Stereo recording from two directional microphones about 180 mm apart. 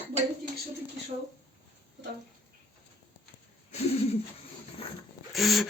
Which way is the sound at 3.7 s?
35° left (ahead or behind).